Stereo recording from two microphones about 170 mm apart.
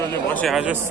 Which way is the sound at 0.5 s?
10° right (ahead or behind).